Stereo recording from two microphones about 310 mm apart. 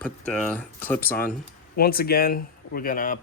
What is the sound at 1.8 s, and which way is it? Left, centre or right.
Speech, left.